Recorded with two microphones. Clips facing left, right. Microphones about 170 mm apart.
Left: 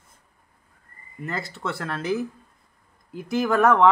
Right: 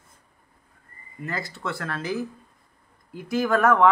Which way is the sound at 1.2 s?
25° left (ahead or behind).